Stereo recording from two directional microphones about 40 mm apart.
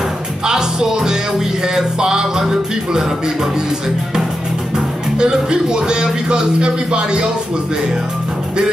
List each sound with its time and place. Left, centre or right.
0.5 s music: centre
4.7 s speech: right